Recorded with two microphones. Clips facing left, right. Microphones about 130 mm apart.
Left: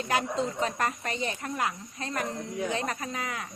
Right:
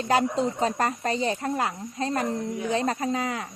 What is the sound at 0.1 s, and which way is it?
Speech, 30° right (ahead or behind).